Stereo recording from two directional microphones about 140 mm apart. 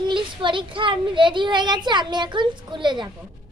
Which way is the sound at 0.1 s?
35° right (ahead or behind).